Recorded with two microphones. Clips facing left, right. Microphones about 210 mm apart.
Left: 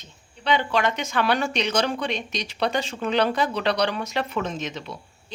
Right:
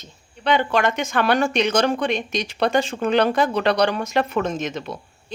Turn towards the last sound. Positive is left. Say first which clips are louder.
# right 5 dB
turn(degrees=-50)  # may be behind; listen again after turning